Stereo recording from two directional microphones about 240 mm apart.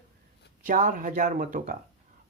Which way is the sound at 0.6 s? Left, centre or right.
Right.